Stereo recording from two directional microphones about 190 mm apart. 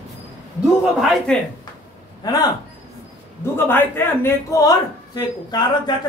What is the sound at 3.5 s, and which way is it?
A man's voice, 10° left (ahead or behind).